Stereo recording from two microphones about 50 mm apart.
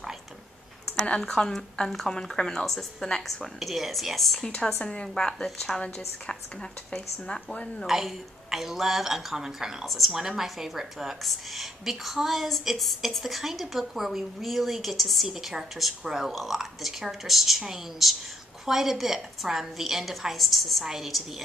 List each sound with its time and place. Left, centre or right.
1.2 s a woman's voice: centre
3.5 s a woman's voice: centre
4.8 s a woman's voice: centre
7.5 s a woman's voice: centre
7.8 s a woman's voice: centre